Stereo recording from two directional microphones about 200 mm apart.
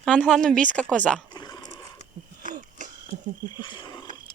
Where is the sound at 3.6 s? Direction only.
25° left (ahead or behind).